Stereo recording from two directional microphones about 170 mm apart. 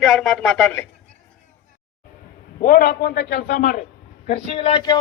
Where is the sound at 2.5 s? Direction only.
60° left (ahead or behind).